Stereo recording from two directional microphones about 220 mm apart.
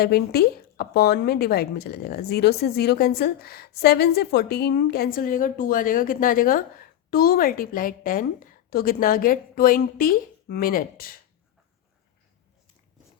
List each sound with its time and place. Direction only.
0.0 s a woman's voice: 45° left (ahead or behind)